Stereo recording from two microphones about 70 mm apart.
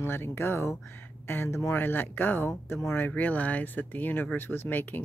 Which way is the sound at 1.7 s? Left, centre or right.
Left.